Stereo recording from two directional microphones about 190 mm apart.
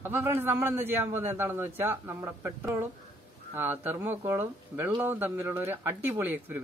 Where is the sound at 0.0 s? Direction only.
10° right (ahead or behind).